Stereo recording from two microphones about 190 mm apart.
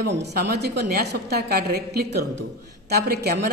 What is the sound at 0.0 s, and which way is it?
A woman's voice, 60° right (ahead or behind).